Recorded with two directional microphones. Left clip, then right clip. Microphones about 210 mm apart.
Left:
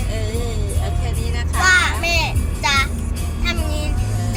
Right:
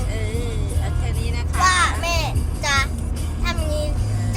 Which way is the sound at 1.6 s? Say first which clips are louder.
Left 3 dB; 20° right (ahead or behind).